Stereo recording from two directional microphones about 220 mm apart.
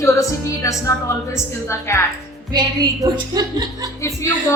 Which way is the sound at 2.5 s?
20° right (ahead or behind).